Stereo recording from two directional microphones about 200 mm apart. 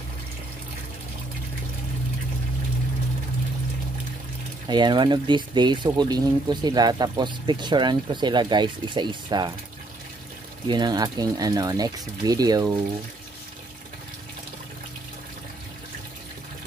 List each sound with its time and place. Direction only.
4.6 s speech: 20° right (ahead or behind)
10.7 s speech: 20° right (ahead or behind)